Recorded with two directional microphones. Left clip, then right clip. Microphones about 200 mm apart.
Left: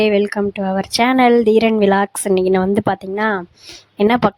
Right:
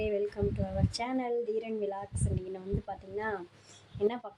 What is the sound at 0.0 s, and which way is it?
A woman's voice, 55° left (ahead or behind).